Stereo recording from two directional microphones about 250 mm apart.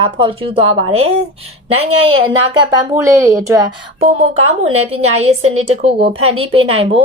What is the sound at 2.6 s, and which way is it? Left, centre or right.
A woman's voice, centre.